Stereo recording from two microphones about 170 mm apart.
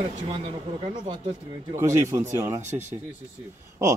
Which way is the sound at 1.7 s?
15° right (ahead or behind).